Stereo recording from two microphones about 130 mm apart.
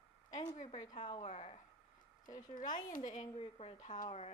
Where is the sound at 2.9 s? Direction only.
75° left (ahead or behind).